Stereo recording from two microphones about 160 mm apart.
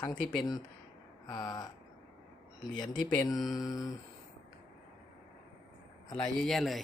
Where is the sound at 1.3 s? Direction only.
25° left (ahead or behind).